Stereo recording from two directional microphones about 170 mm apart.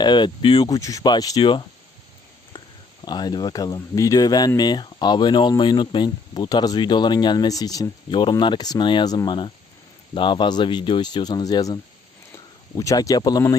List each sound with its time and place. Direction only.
0.0 s speech: 25° left (ahead or behind)
3.0 s speech: 25° left (ahead or behind)